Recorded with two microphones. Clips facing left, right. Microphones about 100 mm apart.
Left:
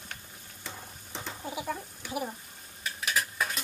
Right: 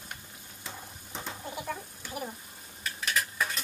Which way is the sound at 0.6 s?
Centre (ahead or behind).